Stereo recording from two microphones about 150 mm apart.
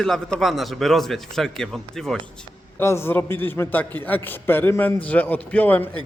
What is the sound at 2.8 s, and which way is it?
A man's voice, 15° left (ahead or behind).